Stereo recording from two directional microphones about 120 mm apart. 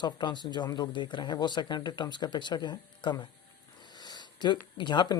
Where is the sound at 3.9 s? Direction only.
35° left (ahead or behind).